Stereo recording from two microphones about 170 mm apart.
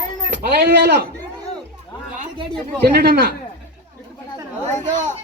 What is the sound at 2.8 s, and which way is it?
Speech, 70° right (ahead or behind).